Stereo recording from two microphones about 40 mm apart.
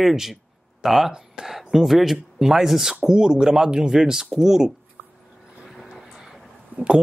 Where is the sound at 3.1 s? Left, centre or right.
Centre.